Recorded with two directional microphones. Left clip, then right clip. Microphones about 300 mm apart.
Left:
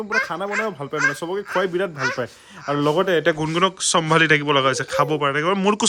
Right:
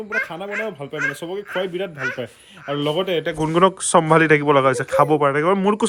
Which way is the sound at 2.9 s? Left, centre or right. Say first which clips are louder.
Left 2 dB; centre.